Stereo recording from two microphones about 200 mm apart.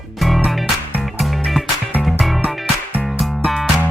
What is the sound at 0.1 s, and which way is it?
Music, centre (ahead or behind).